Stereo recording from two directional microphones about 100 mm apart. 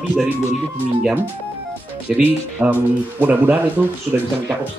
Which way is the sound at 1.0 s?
15° right (ahead or behind).